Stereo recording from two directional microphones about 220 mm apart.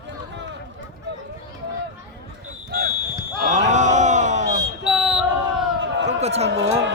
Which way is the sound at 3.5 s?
35° right (ahead or behind).